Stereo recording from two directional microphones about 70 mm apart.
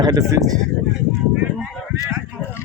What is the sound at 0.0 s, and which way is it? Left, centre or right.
Speech, right.